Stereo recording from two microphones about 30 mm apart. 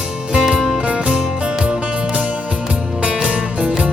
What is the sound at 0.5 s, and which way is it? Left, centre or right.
Music, centre.